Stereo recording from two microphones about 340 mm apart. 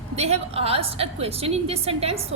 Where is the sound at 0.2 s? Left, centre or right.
Centre.